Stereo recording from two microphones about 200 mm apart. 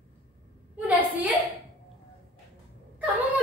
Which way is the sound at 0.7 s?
10° right (ahead or behind).